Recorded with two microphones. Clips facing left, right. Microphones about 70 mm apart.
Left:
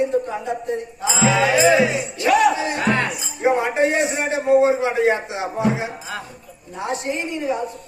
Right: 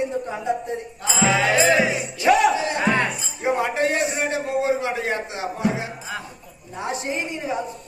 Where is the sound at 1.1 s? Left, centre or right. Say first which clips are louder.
Left 2 dB; centre.